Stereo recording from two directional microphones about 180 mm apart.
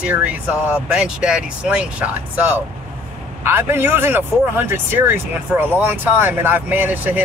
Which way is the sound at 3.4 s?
15° right (ahead or behind).